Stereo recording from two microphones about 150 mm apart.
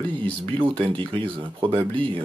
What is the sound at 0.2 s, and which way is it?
Speech, 30° right (ahead or behind).